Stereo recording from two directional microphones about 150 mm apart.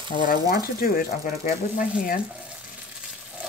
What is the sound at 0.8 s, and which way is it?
Speech, 70° left (ahead or behind).